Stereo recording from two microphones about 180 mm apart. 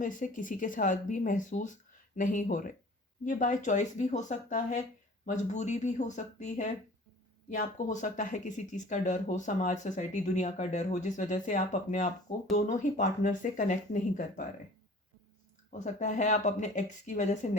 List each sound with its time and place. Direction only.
0.0 s speech: 45° left (ahead or behind)
15.7 s speech: 40° left (ahead or behind)